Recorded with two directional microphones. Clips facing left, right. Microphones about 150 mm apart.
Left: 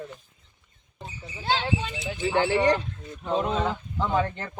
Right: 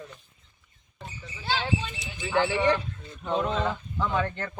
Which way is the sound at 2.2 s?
35° left (ahead or behind).